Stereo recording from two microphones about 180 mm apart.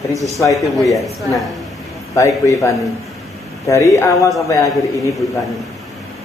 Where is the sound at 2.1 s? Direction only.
15° left (ahead or behind).